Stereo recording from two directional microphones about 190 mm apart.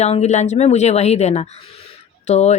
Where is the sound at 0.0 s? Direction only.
35° left (ahead or behind).